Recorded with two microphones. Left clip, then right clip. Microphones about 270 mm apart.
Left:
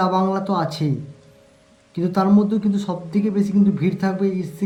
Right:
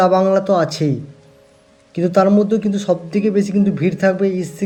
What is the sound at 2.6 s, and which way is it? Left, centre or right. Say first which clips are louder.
Speech: right 7 dB; centre.